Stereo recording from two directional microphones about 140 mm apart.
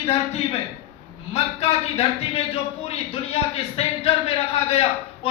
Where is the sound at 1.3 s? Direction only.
45° left (ahead or behind).